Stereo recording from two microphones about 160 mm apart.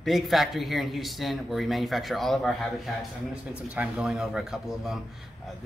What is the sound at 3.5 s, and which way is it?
Speech, 10° right (ahead or behind).